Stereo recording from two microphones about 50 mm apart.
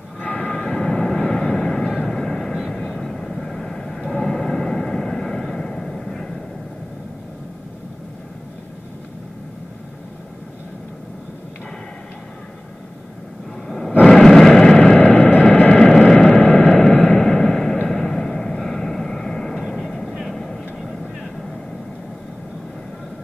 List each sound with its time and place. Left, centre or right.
0.2 s train: left
0.5 s vehicle: centre
13.7 s a sound: centre
15.3 s vehicle: centre
16.9 s vehicle: left
17.2 s a sound: centre
17.8 s vehicle: centre